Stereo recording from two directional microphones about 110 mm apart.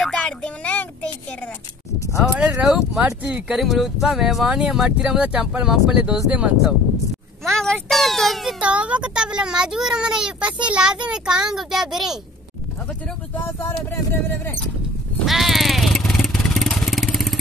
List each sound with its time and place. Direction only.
0.0 s a sound: 5° left (ahead or behind)
2.1 s speech: 5° right (ahead or behind)
7.4 s a sound: 5° left (ahead or behind)
8.5 s speech: 10° right (ahead or behind)
13.7 s speech: 20° left (ahead or behind)
15.2 s vehicle: centre (ahead or behind)